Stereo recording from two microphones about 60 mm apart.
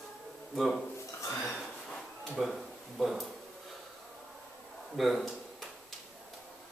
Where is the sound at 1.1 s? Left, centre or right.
Left.